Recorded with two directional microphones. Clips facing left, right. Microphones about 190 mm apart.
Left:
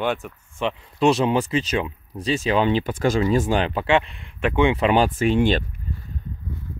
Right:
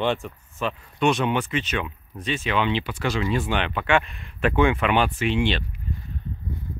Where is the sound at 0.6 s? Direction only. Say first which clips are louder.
Left 3 dB; 30° left (ahead or behind).